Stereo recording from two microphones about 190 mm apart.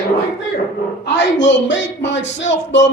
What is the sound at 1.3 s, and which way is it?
A man's voice, 70° left (ahead or behind).